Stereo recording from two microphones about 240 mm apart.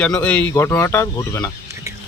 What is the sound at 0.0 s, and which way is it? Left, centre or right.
Speech, centre.